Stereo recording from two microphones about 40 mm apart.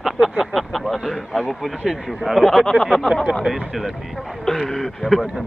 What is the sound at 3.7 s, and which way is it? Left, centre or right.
Speech, centre.